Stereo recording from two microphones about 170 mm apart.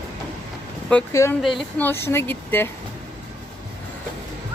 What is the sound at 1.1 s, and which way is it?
Speech, 15° left (ahead or behind).